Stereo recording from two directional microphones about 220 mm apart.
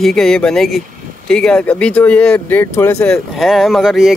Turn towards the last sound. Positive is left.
turn(degrees=0)  # may be behind; listen again after turning